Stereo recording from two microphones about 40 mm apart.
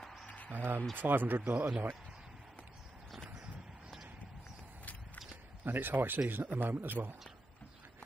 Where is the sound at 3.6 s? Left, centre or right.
Right.